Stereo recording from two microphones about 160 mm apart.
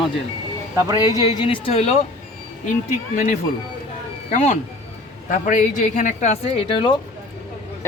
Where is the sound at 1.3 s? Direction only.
30° left (ahead or behind).